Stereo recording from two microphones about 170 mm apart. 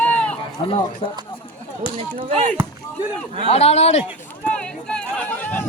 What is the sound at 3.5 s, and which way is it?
Speech, 40° left (ahead or behind).